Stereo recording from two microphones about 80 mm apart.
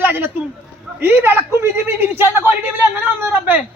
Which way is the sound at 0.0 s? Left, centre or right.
Right.